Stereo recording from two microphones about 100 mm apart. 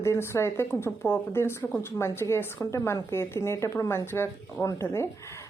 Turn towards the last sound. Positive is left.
turn(degrees=30)  # may be behind; listen again after turning